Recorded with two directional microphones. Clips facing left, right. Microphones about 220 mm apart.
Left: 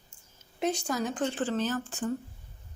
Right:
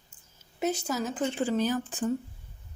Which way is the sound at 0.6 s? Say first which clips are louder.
Even; 5° right (ahead or behind).